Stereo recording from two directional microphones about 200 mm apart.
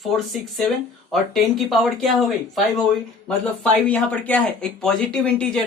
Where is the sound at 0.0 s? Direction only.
Centre (ahead or behind).